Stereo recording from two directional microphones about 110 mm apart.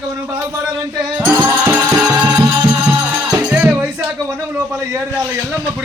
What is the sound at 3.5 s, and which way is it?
Music, 15° right (ahead or behind).